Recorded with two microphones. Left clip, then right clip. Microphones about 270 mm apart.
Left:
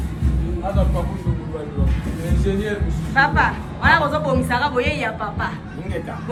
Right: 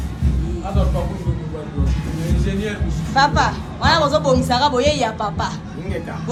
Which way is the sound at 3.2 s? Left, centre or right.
Centre.